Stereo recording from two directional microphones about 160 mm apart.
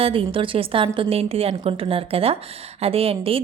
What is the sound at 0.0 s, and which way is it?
Speech, 35° right (ahead or behind).